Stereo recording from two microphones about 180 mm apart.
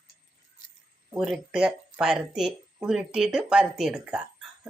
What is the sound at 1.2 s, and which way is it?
Speech, centre (ahead or behind).